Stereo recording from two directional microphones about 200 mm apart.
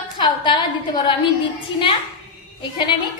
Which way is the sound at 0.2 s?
20° left (ahead or behind).